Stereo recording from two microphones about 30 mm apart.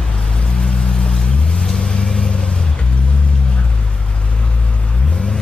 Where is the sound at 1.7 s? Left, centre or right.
Left.